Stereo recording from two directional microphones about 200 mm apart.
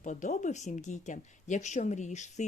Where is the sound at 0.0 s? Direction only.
40° left (ahead or behind).